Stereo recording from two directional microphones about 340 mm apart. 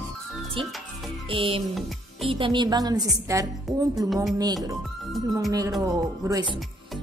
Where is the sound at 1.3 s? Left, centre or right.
Centre.